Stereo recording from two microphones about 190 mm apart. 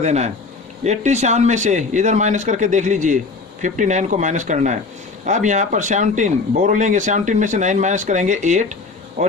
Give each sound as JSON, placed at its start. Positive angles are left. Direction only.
{"t": 0.0, "sound": "speech", "side_deg": -35}